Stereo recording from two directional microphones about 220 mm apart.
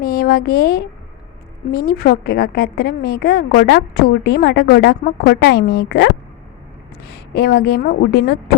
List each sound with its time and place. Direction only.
0.0 s a woman's voice: 45° left (ahead or behind)
1.9 s a woman's voice: 45° left (ahead or behind)
7.1 s a woman's voice: 45° left (ahead or behind)